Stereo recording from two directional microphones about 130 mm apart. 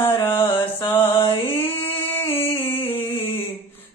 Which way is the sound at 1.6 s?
15° left (ahead or behind).